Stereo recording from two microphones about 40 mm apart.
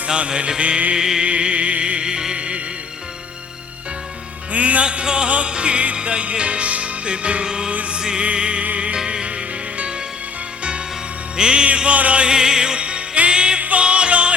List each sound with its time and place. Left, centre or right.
0.1 s music: right
1.2 s music: right
4.5 s music: right; by 7.7 s centre
7.7 s music: right
7.9 s music: right
12.2 s music: centre
12.8 s music: right
13.6 s music: right
13.8 s music: right